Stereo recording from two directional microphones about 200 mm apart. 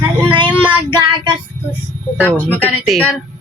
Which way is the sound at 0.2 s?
25° right (ahead or behind).